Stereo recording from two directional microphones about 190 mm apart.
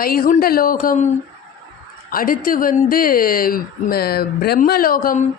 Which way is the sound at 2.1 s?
50° left (ahead or behind).